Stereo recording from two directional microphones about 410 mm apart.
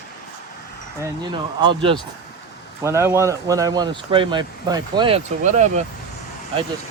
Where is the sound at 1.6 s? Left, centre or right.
Centre.